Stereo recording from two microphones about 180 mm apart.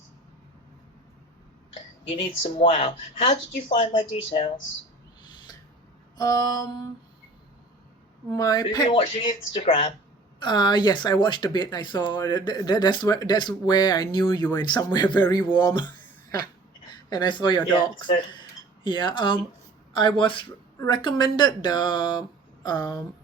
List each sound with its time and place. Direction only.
2.1 s speech: 35° left (ahead or behind)
6.1 s mantra: 20° left (ahead or behind)
8.3 s speech: 20° left (ahead or behind)
17.1 s speech: 25° left (ahead or behind)